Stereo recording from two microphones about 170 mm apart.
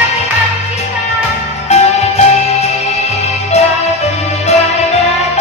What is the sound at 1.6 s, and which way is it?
Music, 40° left (ahead or behind).